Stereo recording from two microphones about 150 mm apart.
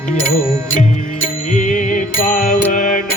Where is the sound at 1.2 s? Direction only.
60° left (ahead or behind).